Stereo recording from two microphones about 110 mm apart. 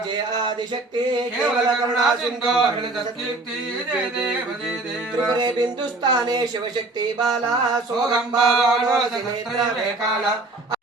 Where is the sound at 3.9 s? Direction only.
5° right (ahead or behind).